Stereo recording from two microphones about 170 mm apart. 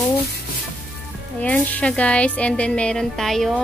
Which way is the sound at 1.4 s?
5° left (ahead or behind).